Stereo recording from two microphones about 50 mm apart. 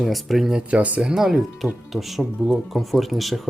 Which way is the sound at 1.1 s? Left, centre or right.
Centre.